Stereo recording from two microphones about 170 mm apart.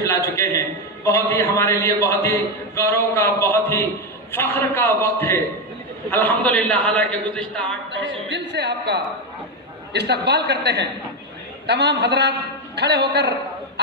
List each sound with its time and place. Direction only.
1.0 s a man's voice: 15° left (ahead or behind)
7.9 s a woman's voice: 90° right